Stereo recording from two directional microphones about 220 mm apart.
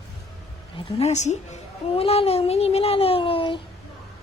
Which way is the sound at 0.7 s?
30° left (ahead or behind).